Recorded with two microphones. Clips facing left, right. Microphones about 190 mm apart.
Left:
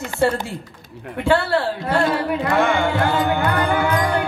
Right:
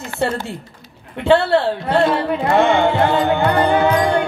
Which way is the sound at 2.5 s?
25° right (ahead or behind).